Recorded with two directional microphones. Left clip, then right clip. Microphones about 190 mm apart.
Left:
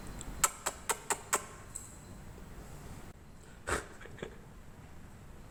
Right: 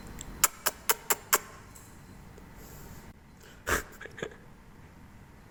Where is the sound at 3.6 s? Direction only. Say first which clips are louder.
Right 6 dB; 20° right (ahead or behind).